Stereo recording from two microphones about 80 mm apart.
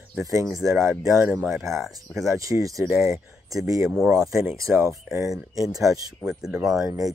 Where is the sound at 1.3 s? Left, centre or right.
Centre.